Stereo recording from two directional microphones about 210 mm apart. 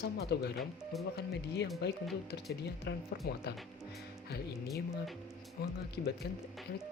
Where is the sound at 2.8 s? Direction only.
50° left (ahead or behind).